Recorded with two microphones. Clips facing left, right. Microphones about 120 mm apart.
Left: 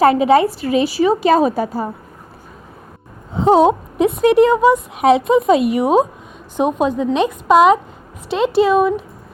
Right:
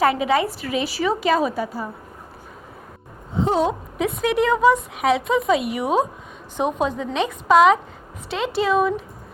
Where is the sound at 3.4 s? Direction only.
85° left; by 4.3 s 65° left (ahead or behind).